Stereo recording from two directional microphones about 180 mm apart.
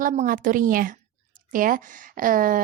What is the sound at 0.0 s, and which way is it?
A woman's voice, 45° right (ahead or behind).